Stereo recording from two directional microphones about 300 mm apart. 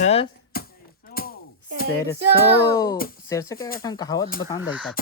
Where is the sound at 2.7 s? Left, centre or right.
Centre.